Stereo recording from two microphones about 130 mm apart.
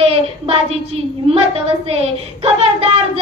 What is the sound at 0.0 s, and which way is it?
Child singing, 50° right (ahead or behind).